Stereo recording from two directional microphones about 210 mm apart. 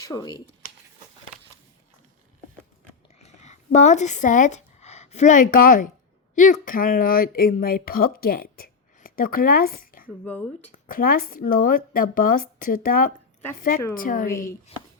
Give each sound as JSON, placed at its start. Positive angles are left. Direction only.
{"t": 0.0, "sound": "speech", "side_deg": 15}
{"t": 3.2, "sound": "speech", "side_deg": 30}
{"t": 10.2, "sound": "speech", "side_deg": 5}
{"t": 10.7, "sound": "a woman's voice", "side_deg": 40}
{"t": 14.3, "sound": "speech", "side_deg": 15}
{"t": 14.7, "sound": "speech", "side_deg": 30}